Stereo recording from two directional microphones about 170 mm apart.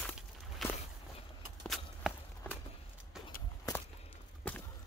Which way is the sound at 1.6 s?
Centre (ahead or behind).